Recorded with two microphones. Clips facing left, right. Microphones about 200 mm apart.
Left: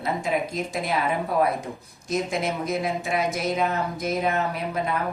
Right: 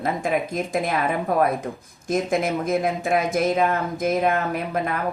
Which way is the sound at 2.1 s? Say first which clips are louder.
Right 4 dB; 50° right (ahead or behind).